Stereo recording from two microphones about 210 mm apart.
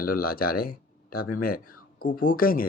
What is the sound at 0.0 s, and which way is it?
Speech, 45° left (ahead or behind).